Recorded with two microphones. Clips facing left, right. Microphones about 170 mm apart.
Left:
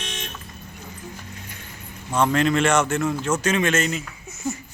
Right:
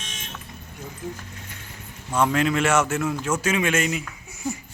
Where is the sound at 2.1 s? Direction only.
5° right (ahead or behind).